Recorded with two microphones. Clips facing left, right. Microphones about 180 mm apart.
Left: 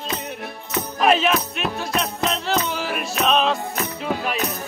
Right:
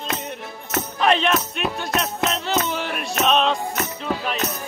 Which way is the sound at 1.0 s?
5° left (ahead or behind).